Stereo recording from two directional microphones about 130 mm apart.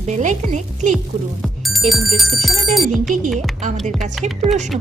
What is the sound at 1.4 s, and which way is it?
Speech, centre (ahead or behind).